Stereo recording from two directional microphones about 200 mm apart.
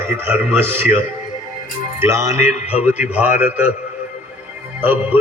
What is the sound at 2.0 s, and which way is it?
Speech, 15° right (ahead or behind).